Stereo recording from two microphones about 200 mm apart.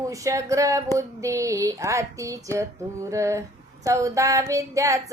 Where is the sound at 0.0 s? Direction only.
15° right (ahead or behind).